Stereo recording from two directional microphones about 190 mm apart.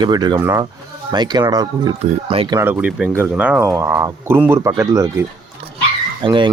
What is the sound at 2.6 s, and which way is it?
Speech, 10° right (ahead or behind).